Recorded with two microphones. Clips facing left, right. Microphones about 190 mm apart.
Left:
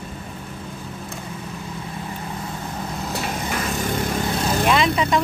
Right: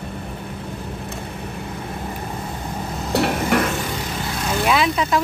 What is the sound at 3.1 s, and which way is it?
Dishes, 65° right (ahead or behind).